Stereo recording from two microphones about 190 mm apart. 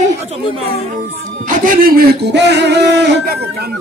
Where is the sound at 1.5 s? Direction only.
50° right (ahead or behind).